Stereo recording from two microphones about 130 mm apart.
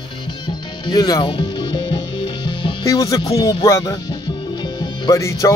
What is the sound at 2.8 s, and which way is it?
Speech, 25° left (ahead or behind).